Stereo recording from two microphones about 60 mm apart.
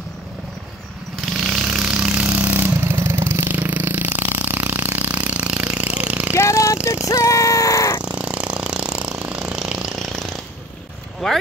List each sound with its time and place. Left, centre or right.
1.3 s vehicle: centre
2.3 s vehicle: right
3.5 s a sound: right
6.3 s speech: left
7.1 s music: left
8.0 s lawn mower: right
9.2 s a sound: centre
9.9 s a sound: centre
11.2 s speech: centre